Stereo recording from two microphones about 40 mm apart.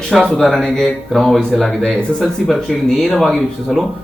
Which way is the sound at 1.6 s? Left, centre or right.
Centre.